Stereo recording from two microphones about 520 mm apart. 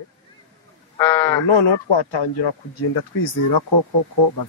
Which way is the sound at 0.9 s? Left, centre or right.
Centre.